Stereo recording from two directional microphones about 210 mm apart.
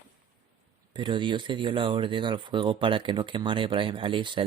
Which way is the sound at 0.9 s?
20° right (ahead or behind).